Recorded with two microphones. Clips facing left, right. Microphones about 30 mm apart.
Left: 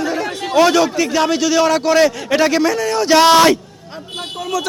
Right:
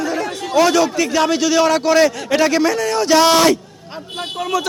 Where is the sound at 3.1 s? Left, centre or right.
Left.